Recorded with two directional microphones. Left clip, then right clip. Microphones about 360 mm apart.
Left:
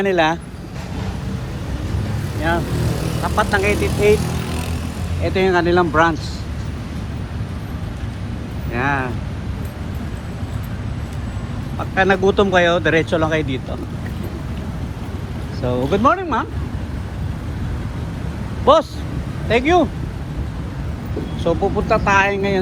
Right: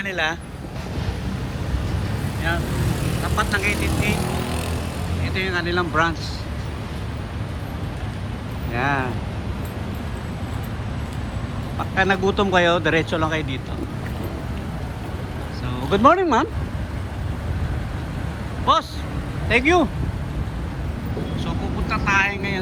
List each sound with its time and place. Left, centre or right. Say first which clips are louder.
0.0 s speech: left 7 dB; centre
3.2 s speech: left 5 dB; centre
4.3 s vehicle: even; right
5.2 s speech: left 8 dB; centre
8.7 s speech: left 2 dB; centre
11.9 s speech: left 5 dB; centre
15.9 s speech: right 2 dB; centre
18.6 s speech: left 6 dB; centre
21.4 s speech: left 10 dB; centre